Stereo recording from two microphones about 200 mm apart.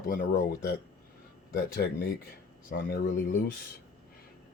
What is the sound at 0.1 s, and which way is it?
Speech, 50° left (ahead or behind).